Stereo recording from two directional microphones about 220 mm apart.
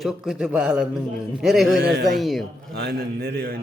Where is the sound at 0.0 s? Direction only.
Centre (ahead or behind).